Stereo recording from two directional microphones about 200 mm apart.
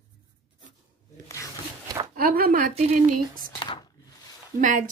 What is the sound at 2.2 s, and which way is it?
A woman's voice, 45° right (ahead or behind).